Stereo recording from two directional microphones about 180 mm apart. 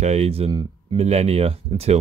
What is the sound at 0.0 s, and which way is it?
Speech, 35° right (ahead or behind).